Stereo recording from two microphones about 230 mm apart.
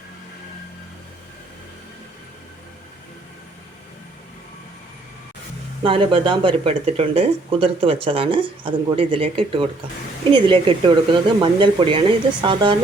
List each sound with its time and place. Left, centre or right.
5.8 s speech: right